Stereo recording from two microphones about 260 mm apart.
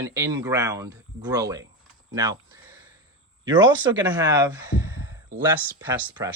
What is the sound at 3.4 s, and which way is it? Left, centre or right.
Speech, centre.